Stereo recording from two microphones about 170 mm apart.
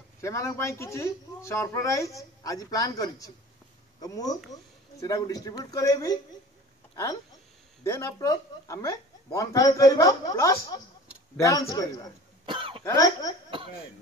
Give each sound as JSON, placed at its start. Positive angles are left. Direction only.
{"t": 0.2, "sound": "speech", "side_deg": 15}
{"t": 7.8, "sound": "speech", "side_deg": 15}
{"t": 12.4, "sound": "cough", "side_deg": -30}
{"t": 12.8, "sound": "speech", "side_deg": 20}